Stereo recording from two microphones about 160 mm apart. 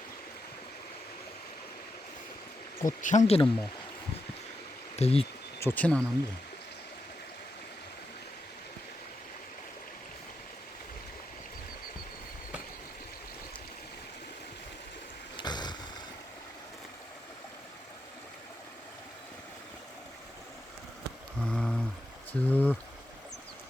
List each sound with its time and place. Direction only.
2.8 s speech: 50° left (ahead or behind)
4.9 s speech: 40° left (ahead or behind)
5.5 s speech: 15° left (ahead or behind)
15.4 s boat: 25° left (ahead or behind)
21.4 s a sound: 5° left (ahead or behind)